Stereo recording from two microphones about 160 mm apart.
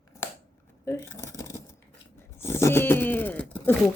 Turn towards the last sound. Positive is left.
turn(degrees=10)  # may be behind; listen again after turning